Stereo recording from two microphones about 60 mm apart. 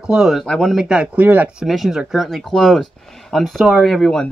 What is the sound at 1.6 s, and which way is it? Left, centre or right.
Speech, centre.